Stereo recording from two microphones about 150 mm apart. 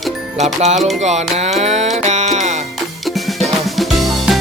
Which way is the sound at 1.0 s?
50° right (ahead or behind).